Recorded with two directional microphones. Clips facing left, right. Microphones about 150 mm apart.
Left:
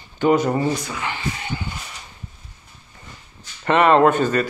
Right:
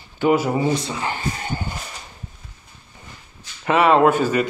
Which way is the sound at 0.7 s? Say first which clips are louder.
Right 3 dB; 30° right (ahead or behind).